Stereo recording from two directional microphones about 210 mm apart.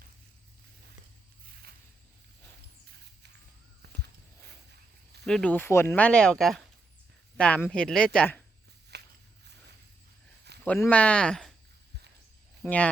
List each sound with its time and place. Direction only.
5.2 s speech: 5° left (ahead or behind)
8.9 s walk: 50° right (ahead or behind)
10.6 s speech: 10° left (ahead or behind)
12.6 s speech: 5° left (ahead or behind)